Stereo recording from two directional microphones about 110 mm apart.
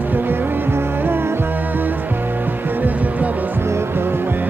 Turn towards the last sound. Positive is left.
turn(degrees=-20)  # may be behind; listen again after turning